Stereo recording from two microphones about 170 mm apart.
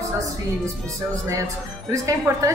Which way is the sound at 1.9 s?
20° right (ahead or behind).